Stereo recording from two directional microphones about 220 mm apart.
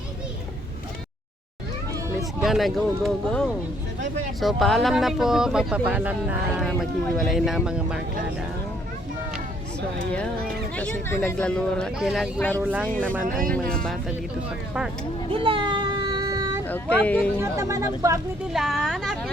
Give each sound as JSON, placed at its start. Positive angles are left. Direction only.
{"t": 2.4, "sound": "speech", "side_deg": 0}
{"t": 10.8, "sound": "speech", "side_deg": 5}
{"t": 15.3, "sound": "a sound", "side_deg": -25}
{"t": 16.6, "sound": "speech", "side_deg": 5}
{"t": 17.4, "sound": "speech", "side_deg": -15}
{"t": 18.5, "sound": "speech", "side_deg": 0}